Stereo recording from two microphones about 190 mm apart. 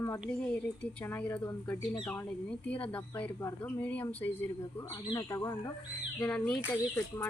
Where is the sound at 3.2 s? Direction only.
10° left (ahead or behind).